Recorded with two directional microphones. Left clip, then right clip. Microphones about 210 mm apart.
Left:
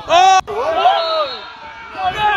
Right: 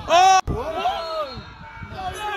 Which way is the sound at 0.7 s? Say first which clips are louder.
Left 11 dB; 40° right (ahead or behind).